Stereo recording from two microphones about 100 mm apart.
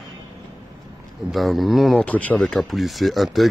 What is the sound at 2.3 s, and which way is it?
Speech, 5° left (ahead or behind).